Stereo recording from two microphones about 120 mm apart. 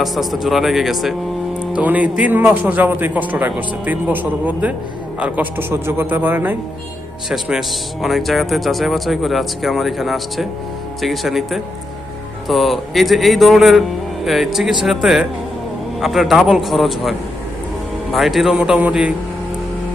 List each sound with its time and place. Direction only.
0.0 s speech: centre (ahead or behind)
1.7 s speech: 10° right (ahead or behind)
7.3 s speech: 5° right (ahead or behind)